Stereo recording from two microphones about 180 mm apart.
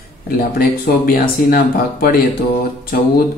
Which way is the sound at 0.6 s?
55° left (ahead or behind).